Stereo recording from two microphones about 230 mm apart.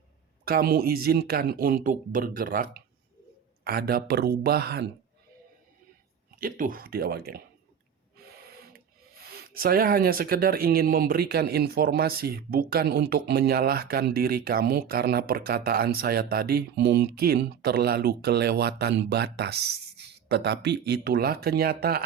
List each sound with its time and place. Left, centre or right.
0.4 s speech: right
6.3 s speech: right
8.2 s a sound: right
9.3 s speech: right